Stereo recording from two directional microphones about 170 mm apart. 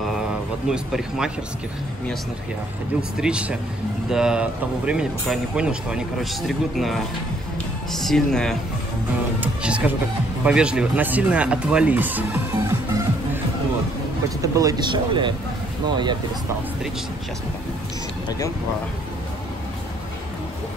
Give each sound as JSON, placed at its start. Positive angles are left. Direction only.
{"t": 0.7, "sound": "speech", "side_deg": -5}
{"t": 3.0, "sound": "speech", "side_deg": -5}
{"t": 14.4, "sound": "speech", "side_deg": -20}